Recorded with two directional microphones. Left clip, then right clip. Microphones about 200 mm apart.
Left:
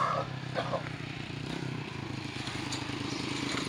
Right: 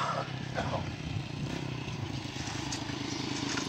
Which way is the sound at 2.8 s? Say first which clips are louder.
Left 1 dB; 30° right (ahead or behind).